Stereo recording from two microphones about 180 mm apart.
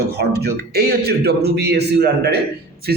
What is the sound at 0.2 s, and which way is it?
Speech, 65° right (ahead or behind).